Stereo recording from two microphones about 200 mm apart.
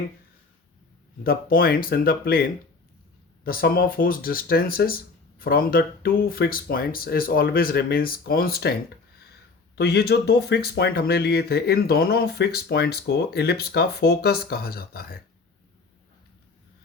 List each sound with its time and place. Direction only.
1.2 s speech: 45° left (ahead or behind)
9.7 s speech: 55° left (ahead or behind)